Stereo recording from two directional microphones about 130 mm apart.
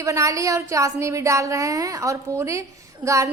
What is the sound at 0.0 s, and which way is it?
Speech, 25° right (ahead or behind).